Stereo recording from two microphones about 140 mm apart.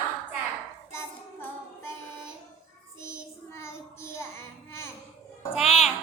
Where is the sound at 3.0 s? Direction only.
20° left (ahead or behind).